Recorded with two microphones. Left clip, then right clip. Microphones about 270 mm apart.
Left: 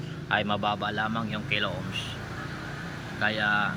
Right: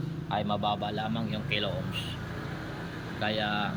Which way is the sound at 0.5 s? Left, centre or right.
Centre.